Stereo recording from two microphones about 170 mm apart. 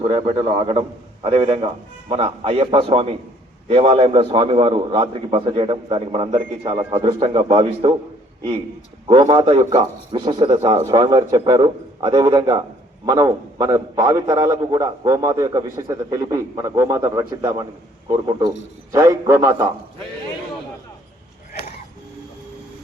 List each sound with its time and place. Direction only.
0.0 s a man's voice: 30° right (ahead or behind)